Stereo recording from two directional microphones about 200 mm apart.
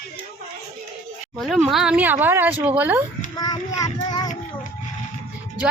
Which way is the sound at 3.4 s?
20° left (ahead or behind).